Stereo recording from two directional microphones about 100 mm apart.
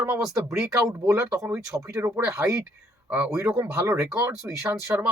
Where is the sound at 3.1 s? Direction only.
15° right (ahead or behind).